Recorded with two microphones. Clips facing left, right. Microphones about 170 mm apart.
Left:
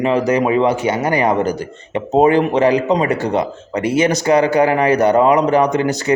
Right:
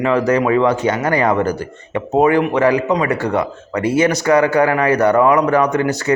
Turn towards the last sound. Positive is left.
turn(degrees=20)  # may be behind; listen again after turning